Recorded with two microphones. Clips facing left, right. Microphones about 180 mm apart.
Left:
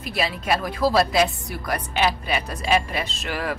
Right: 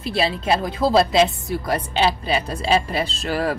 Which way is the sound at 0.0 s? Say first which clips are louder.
Right 4 dB; 30° right (ahead or behind).